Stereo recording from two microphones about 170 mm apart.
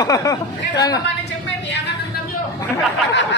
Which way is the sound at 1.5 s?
90° left.